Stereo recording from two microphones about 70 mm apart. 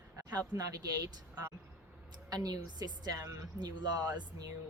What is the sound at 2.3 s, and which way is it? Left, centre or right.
Speech, right.